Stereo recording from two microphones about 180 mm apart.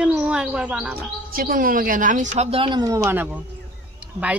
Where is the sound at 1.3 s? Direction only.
55° right (ahead or behind).